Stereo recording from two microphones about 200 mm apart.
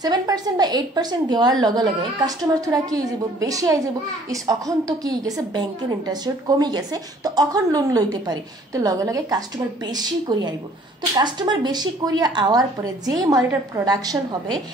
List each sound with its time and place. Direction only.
0.0 s a woman's voice: 20° right (ahead or behind)